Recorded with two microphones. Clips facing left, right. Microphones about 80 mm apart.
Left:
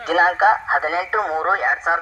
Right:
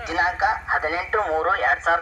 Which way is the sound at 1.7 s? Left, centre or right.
Centre.